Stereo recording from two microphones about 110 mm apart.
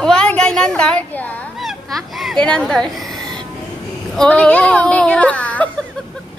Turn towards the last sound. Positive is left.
turn(degrees=10)  # may be behind; listen again after turning